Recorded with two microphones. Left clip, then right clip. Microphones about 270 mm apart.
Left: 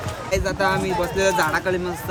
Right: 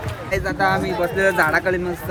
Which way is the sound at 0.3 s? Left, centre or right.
Centre.